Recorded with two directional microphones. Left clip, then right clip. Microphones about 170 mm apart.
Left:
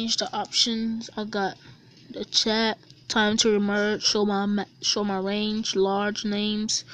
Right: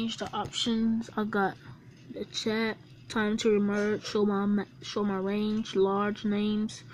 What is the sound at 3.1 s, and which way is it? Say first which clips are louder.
Speech: left 5 dB; 30° left (ahead or behind).